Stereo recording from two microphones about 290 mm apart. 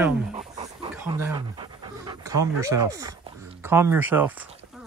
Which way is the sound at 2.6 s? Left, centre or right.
Centre.